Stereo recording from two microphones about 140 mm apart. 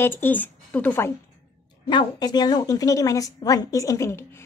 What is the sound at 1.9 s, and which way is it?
A woman's voice, 30° left (ahead or behind).